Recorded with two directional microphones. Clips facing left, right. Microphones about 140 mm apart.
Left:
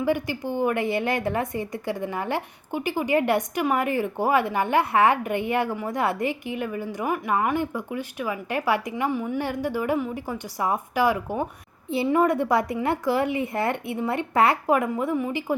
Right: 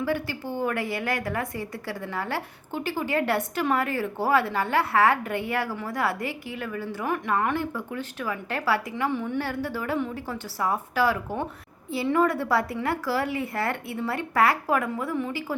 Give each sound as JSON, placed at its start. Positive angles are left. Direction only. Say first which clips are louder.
{"t": 0.0, "sound": "a woman's voice", "louder": "left 3 dB", "side_deg": 15}